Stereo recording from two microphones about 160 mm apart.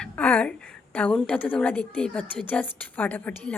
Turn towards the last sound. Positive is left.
turn(degrees=10)  # may be behind; listen again after turning